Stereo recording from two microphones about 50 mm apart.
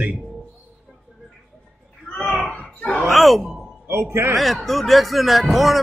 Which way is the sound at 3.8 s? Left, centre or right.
Right.